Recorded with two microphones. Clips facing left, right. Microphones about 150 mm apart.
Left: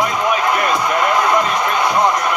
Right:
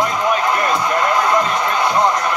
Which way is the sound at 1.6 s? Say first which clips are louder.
Even; 15° left (ahead or behind).